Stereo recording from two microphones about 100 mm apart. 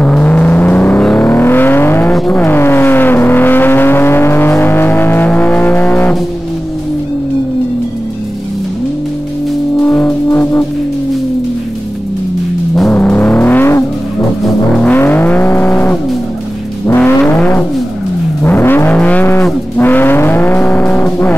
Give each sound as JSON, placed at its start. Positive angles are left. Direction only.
{"t": 0.0, "sound": "music", "side_deg": 15}
{"t": 1.0, "sound": "vehicle", "side_deg": 20}
{"t": 9.8, "sound": "music", "side_deg": 10}
{"t": 10.3, "sound": "music", "side_deg": 20}
{"t": 12.9, "sound": "vehicle", "side_deg": 20}